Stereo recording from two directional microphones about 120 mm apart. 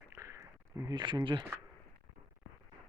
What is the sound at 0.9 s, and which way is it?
Speech, 40° right (ahead or behind).